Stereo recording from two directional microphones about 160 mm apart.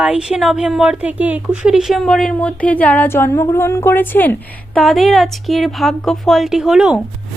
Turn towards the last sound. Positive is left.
turn(degrees=-5)  # may be behind; listen again after turning